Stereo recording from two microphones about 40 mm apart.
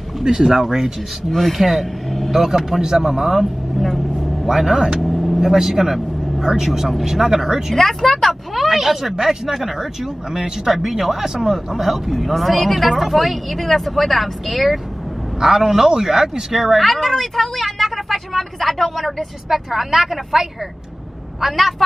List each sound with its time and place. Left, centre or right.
0.2 s speech: centre
1.6 s speech: centre
3.7 s speech: centre
5.0 s vehicle: centre
5.5 s speech: centre
7.7 s speech: centre
15.4 s speech: centre